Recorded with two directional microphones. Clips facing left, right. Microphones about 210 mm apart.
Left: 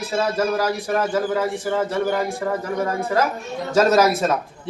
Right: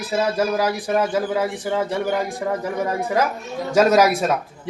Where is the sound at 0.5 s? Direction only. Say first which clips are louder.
Right 1 dB; 15° right (ahead or behind).